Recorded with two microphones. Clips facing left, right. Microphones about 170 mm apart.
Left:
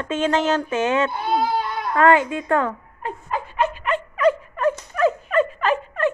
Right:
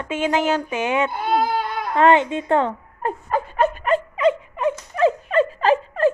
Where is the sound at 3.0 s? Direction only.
45° right (ahead or behind).